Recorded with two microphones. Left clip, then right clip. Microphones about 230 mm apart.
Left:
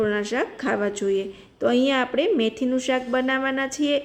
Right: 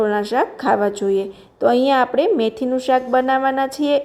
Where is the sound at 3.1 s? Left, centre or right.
Centre.